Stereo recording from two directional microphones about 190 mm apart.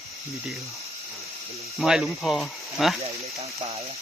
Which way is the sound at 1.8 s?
Centre (ahead or behind).